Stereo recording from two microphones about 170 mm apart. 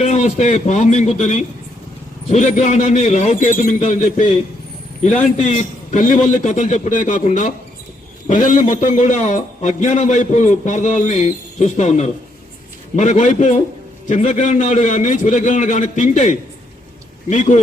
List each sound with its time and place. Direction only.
0.0 s a man's voice: 45° left (ahead or behind)